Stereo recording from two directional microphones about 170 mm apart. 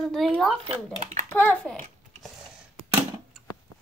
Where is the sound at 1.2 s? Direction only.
10° left (ahead or behind).